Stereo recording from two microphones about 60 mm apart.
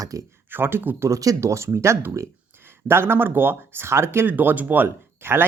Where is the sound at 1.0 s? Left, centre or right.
Right.